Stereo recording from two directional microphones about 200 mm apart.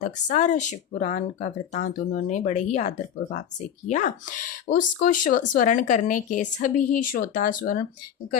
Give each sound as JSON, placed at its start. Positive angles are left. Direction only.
{"t": 0.0, "sound": "speech", "side_deg": 40}